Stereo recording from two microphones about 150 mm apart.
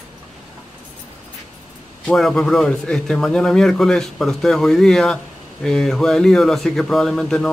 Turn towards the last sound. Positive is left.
turn(degrees=5)  # may be behind; listen again after turning